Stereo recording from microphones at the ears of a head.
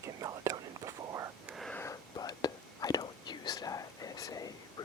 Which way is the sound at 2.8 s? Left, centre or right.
Left.